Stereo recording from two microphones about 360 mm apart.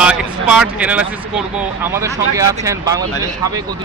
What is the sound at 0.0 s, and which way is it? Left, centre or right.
Speech, centre.